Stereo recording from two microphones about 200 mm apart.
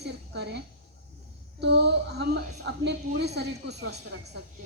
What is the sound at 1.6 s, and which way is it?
A woman's voice, 60° right (ahead or behind).